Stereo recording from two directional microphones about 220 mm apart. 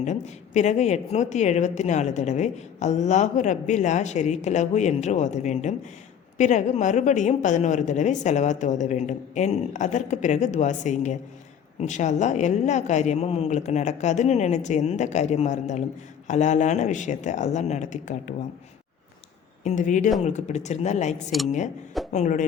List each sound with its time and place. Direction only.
0.0 s speech: 30° left (ahead or behind)
19.6 s speech: 35° left (ahead or behind)